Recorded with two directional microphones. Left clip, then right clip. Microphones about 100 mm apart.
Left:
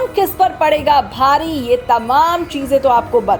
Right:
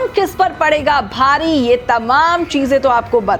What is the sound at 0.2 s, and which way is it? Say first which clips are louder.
A woman's voice: left 1 dB; 40° right (ahead or behind).